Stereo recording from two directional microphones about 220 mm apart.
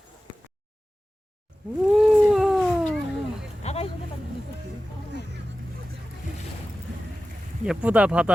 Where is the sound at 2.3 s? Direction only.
Centre (ahead or behind).